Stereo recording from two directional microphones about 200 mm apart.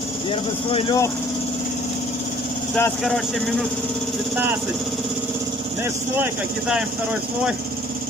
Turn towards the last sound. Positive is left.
turn(degrees=-10)  # may be behind; listen again after turning